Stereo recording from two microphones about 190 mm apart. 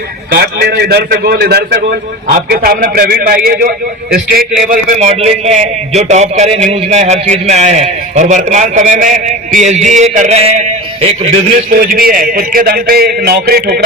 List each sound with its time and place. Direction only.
0.3 s a man's voice: 55° right (ahead or behind)
4.6 s a man's voice: 40° right (ahead or behind)
11.8 s a man's voice: 50° right (ahead or behind)